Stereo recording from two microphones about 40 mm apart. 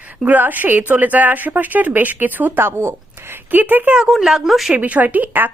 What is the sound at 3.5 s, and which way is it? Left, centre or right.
Speech, right.